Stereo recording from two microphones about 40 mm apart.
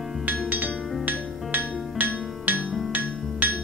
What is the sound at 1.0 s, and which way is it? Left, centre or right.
Music, right.